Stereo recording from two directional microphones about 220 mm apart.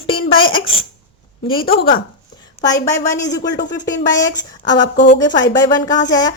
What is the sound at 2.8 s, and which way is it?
Speech, 15° left (ahead or behind).